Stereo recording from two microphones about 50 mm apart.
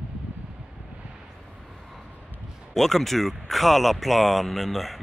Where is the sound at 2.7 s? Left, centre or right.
Centre.